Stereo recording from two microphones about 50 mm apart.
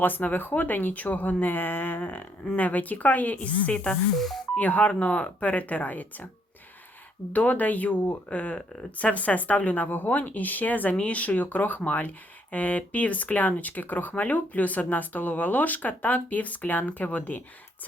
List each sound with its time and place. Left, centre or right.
0.0 s speech: left
7.3 s speech: left